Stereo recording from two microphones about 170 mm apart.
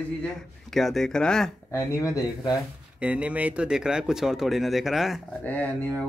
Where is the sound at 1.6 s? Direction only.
20° left (ahead or behind).